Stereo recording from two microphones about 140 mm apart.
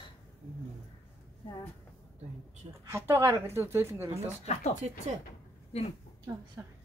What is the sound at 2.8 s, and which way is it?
A woman's voice, 20° right (ahead or behind).